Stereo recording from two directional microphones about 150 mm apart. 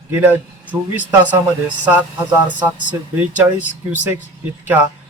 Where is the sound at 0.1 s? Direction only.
15° right (ahead or behind).